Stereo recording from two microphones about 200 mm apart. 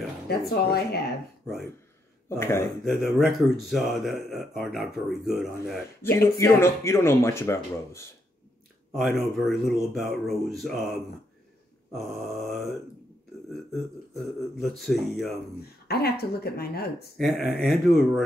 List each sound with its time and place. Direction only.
0.3 s speech: 50° left (ahead or behind)
2.2 s speech: 15° left (ahead or behind)
2.8 s speech: centre (ahead or behind)
6.0 s speech: 10° left (ahead or behind)
8.9 s speech: centre (ahead or behind)
11.9 s speech: centre (ahead or behind)
14.6 s speech: centre (ahead or behind)
15.9 s speech: 50° left (ahead or behind)
17.2 s speech: centre (ahead or behind)